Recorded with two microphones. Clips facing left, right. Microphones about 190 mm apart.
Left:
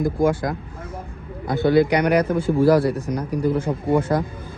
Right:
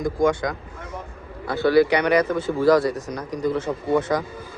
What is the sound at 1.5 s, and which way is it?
A man's voice, 20° left (ahead or behind).